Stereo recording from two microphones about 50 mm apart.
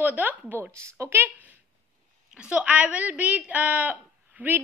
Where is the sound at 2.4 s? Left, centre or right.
Right.